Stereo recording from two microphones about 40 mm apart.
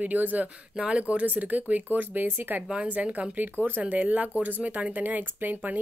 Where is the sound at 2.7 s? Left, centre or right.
Right.